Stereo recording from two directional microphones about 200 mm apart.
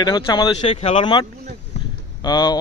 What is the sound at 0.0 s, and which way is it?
A man's voice, 20° left (ahead or behind).